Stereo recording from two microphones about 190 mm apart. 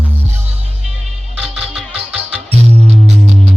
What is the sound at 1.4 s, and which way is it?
Music, centre (ahead or behind).